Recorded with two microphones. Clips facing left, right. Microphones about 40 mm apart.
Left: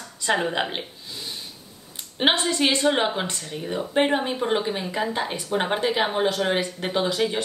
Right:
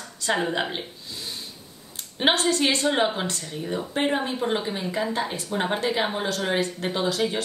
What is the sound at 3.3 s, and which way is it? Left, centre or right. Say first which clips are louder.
A woman's voice: even; left.